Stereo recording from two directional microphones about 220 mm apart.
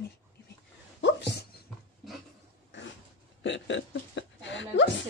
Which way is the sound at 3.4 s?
55° left (ahead or behind).